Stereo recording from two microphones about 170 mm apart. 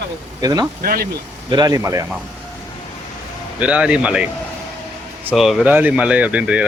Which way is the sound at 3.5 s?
5° right (ahead or behind).